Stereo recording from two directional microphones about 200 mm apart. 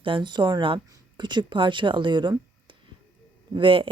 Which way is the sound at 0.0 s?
25° right (ahead or behind).